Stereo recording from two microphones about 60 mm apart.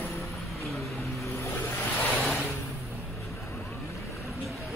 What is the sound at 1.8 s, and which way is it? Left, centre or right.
Vehicle, left.